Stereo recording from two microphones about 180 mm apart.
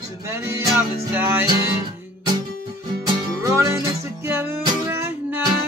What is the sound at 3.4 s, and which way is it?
Music, 20° right (ahead or behind).